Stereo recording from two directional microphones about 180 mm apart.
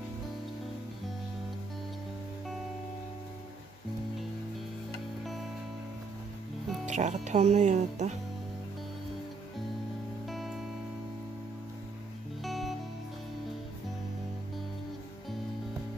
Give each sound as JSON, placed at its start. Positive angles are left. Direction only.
{"t": 5.2, "sound": "music", "side_deg": 0}
{"t": 6.9, "sound": "speech", "side_deg": -40}
{"t": 10.2, "sound": "music", "side_deg": 0}
{"t": 12.4, "sound": "music", "side_deg": 0}